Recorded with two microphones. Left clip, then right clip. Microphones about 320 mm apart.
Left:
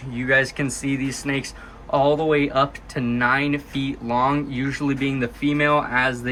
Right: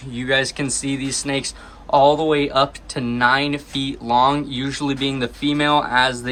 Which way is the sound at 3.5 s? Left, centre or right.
Right.